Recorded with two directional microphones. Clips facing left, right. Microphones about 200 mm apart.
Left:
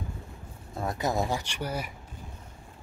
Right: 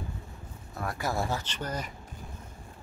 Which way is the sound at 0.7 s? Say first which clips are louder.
Left 3 dB; 20° left (ahead or behind).